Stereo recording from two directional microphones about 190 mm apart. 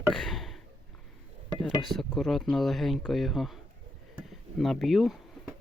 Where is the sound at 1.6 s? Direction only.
Centre (ahead or behind).